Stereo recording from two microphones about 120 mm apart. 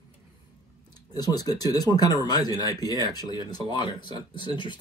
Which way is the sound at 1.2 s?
35° left (ahead or behind).